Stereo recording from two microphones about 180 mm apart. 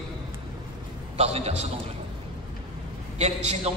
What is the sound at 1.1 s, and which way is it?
Speech, 35° right (ahead or behind).